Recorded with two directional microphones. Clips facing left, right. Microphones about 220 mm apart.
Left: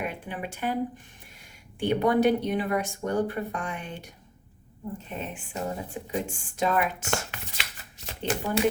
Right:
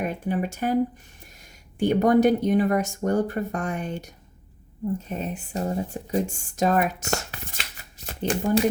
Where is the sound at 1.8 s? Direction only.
45° right (ahead or behind).